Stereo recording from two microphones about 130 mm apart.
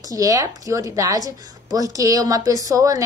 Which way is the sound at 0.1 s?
25° right (ahead or behind).